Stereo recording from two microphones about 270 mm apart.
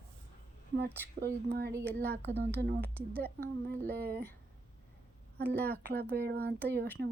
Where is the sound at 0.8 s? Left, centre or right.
Right.